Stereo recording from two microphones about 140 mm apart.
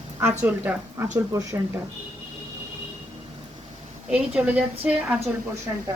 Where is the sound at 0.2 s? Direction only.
15° right (ahead or behind).